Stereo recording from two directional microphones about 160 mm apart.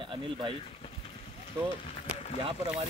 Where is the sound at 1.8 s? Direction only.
40° left (ahead or behind).